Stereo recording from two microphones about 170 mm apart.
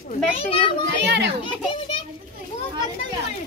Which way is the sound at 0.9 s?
90° right.